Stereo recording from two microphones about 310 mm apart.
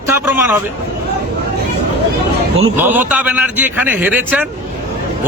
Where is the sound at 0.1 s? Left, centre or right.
Centre.